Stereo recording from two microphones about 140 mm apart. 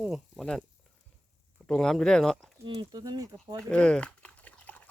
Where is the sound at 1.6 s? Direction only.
5° left (ahead or behind).